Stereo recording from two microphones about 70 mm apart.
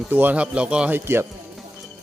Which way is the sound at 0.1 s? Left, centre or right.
Right.